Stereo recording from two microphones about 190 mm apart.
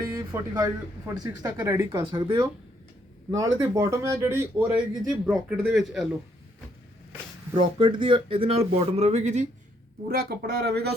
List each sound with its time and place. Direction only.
0.2 s speech: 20° right (ahead or behind); by 6.1 s centre (ahead or behind)
7.8 s speech: 25° right (ahead or behind)
10.1 s speech: 55° right (ahead or behind)